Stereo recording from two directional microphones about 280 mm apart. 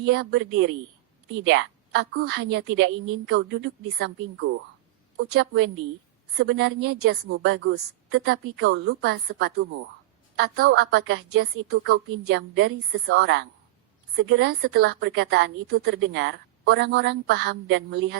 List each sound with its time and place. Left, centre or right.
0.0 s a woman's voice: right